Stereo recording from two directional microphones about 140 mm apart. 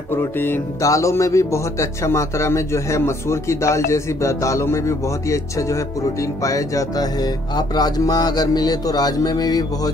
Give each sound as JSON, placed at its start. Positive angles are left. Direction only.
{"t": 0.1, "sound": "speech", "side_deg": 15}